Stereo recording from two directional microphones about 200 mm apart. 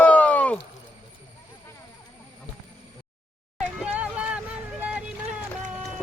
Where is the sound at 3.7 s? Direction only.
5° right (ahead or behind).